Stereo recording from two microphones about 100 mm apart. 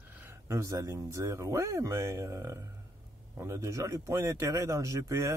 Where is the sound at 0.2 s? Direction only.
25° right (ahead or behind).